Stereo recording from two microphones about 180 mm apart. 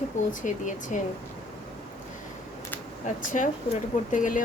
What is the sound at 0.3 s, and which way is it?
Speech, 45° left (ahead or behind).